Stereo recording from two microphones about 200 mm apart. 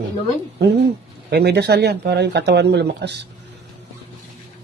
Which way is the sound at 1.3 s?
55° right (ahead or behind).